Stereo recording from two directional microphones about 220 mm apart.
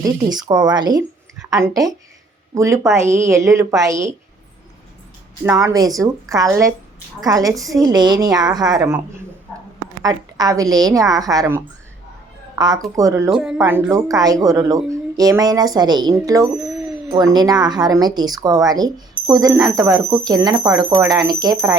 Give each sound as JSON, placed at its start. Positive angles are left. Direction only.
{"t": 0.0, "sound": "speech", "side_deg": -20}
{"t": 5.5, "sound": "speech", "side_deg": -15}
{"t": 10.0, "sound": "a woman's voice", "side_deg": -15}
{"t": 13.3, "sound": "speech", "side_deg": -5}